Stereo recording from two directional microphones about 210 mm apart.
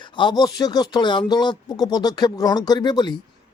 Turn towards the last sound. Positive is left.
turn(degrees=20)  # may be behind; listen again after turning